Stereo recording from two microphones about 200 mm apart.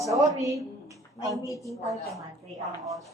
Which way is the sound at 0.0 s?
15° right (ahead or behind).